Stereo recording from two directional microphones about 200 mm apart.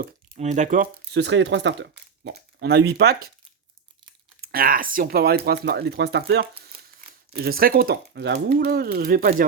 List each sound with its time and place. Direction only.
0.3 s speech: 35° right (ahead or behind)
1.1 s speech: 60° right (ahead or behind)
4.5 s speech: 45° right (ahead or behind)